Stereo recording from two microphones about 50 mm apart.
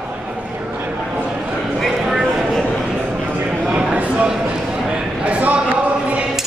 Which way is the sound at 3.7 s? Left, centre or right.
Right.